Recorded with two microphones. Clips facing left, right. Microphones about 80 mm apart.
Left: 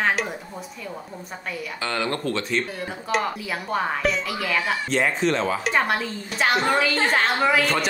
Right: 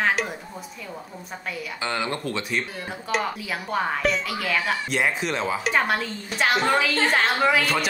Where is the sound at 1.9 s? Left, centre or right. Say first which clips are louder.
Left 2 dB; centre.